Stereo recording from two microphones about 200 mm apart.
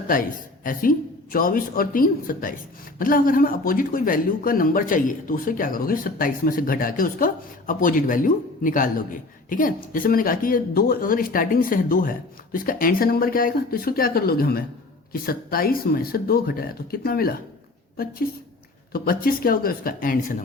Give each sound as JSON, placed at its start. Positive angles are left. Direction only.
{"t": 0.1, "sound": "speech", "side_deg": 45}
{"t": 18.9, "sound": "speech", "side_deg": 45}